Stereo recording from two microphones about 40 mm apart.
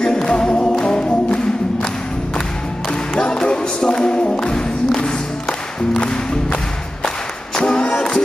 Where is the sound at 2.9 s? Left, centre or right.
Centre.